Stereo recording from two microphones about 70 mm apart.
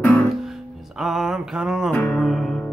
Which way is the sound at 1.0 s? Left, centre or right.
Centre.